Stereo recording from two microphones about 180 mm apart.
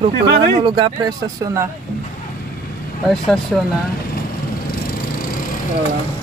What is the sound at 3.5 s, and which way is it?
Speech, 5° left (ahead or behind).